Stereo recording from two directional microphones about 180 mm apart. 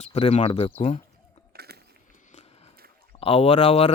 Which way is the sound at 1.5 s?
60° right (ahead or behind).